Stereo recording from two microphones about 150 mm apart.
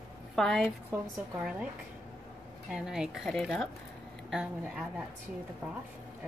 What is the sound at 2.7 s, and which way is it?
A woman's voice, 5° right (ahead or behind).